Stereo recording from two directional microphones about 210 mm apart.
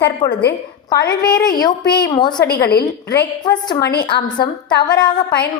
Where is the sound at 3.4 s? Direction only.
20° left (ahead or behind).